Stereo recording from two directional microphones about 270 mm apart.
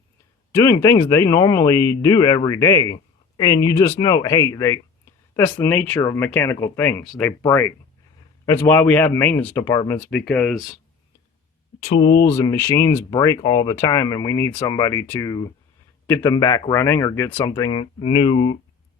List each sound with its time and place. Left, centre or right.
0.5 s speech: centre
11.8 s speech: centre